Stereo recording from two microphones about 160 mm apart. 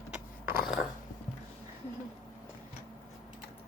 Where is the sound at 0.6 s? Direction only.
Centre (ahead or behind).